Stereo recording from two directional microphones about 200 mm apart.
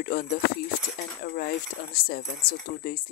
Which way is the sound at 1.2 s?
50° left (ahead or behind).